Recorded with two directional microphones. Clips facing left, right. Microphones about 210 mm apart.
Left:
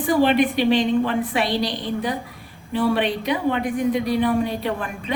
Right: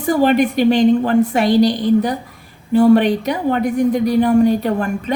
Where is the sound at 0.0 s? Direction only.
40° right (ahead or behind).